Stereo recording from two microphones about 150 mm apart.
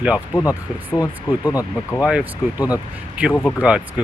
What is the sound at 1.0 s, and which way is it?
Speech, 25° left (ahead or behind).